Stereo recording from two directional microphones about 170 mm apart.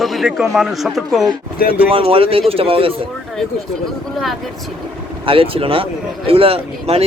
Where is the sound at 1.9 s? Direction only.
30° right (ahead or behind).